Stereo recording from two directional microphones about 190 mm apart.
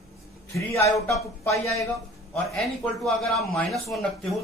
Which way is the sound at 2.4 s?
Centre (ahead or behind).